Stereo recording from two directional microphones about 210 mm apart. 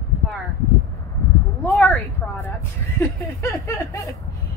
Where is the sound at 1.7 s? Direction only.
Centre (ahead or behind).